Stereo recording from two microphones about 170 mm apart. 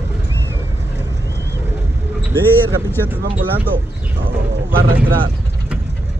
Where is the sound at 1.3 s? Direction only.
80° left.